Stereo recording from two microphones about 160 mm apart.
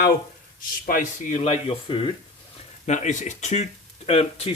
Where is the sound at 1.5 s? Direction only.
35° left (ahead or behind).